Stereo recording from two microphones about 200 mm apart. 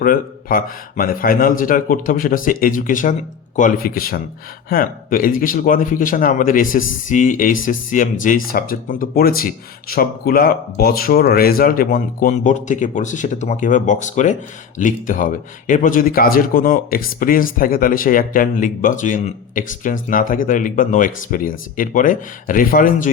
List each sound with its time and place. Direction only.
0.0 s a man's voice: 45° left (ahead or behind)